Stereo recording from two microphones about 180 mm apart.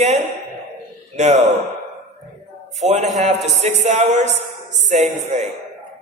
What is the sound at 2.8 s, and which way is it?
A man's voice, 40° right (ahead or behind).